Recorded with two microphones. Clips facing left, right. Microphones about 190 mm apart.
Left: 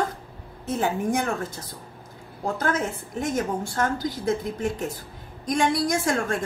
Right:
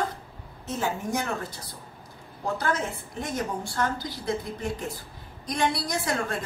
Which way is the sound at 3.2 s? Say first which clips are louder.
Left 5 dB; 45° left (ahead or behind).